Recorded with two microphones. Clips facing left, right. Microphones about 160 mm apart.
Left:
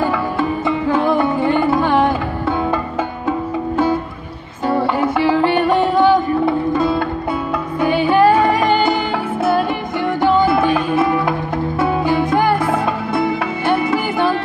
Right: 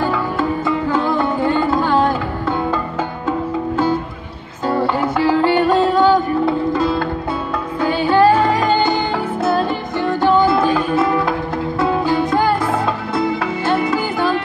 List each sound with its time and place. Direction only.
0.4 s music: 20° left (ahead or behind)
4.6 s music: 25° left (ahead or behind)
7.8 s music: 20° left (ahead or behind)